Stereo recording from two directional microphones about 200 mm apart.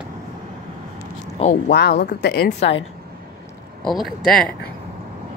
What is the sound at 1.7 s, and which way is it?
Speech, 55° left (ahead or behind).